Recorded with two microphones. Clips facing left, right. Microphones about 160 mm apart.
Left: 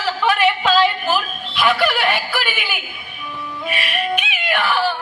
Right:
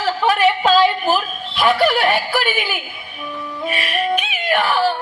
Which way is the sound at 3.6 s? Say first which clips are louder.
Right 2 dB; 40° right (ahead or behind).